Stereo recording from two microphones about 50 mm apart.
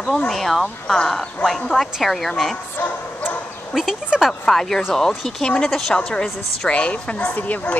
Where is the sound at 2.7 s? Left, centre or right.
Left.